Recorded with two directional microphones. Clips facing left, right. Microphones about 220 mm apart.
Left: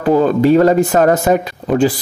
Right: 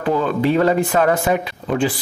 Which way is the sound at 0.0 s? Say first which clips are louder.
Left 6 dB; 40° left (ahead or behind).